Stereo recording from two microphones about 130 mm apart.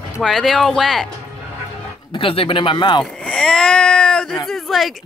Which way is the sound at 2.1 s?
40° left (ahead or behind).